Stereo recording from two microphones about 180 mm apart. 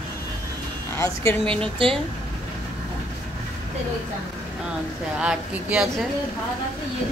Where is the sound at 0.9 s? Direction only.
15° left (ahead or behind).